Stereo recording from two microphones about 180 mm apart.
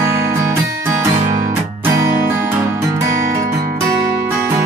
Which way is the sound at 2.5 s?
15° right (ahead or behind).